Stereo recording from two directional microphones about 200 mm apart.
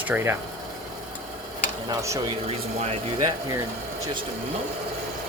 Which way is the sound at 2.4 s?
30° right (ahead or behind).